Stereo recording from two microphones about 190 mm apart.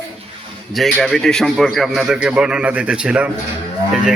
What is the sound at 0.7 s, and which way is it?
A man's voice, centre (ahead or behind).